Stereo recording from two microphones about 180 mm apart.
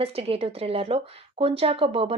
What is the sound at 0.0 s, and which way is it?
A woman's voice, 30° right (ahead or behind).